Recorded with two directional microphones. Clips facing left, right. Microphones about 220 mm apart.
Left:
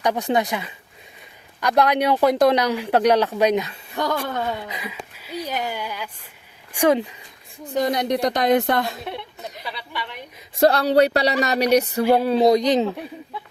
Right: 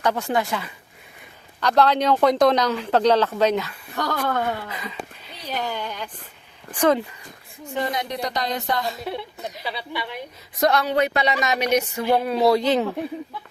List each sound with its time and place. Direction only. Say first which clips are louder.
0.0 s speech: left 2 dB; 15° left (ahead or behind)
7.6 s speech: left 5 dB; 40° left (ahead or behind)
8.1 s a woman's voice: left 8 dB; 50° left (ahead or behind)
10.5 s speech: left 4 dB; 30° left (ahead or behind)
12.4 s speech: left 2 dB; 20° left (ahead or behind)